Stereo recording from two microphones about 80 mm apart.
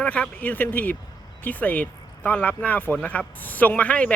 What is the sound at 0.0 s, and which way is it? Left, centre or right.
Speech, centre.